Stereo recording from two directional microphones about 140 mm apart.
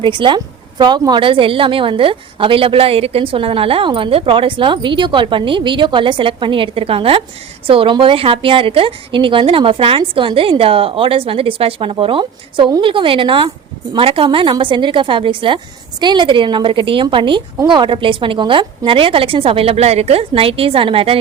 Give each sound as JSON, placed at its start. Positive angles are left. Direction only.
{"t": 0.0, "sound": "a woman's voice", "side_deg": -35}